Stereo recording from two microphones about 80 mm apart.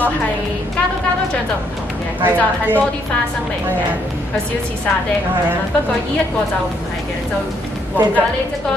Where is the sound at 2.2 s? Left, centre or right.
Right.